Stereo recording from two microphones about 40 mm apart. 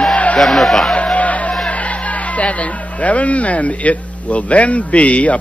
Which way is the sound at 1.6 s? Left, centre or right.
Left.